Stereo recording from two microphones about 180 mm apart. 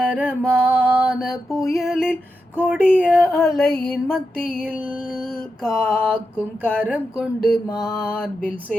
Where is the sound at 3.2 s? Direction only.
15° left (ahead or behind).